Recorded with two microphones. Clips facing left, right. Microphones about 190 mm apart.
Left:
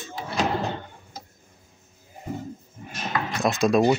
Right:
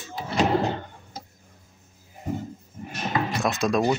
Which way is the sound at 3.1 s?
5° right (ahead or behind).